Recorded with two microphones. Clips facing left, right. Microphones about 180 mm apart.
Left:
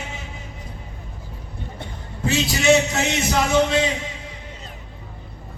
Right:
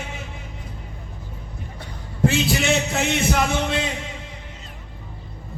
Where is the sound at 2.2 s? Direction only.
55° right (ahead or behind).